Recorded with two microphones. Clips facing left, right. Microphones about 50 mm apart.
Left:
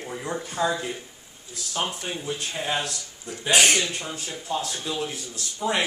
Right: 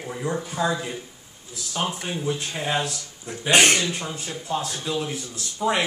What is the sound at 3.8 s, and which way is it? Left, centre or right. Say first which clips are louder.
Speech: right 1 dB; centre.